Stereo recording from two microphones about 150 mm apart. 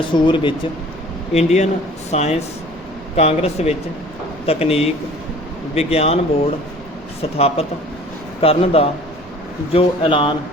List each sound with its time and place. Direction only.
0.1 s speech: 35° left (ahead or behind)
1.3 s speech: 45° left (ahead or behind)
7.2 s speech: 40° left (ahead or behind)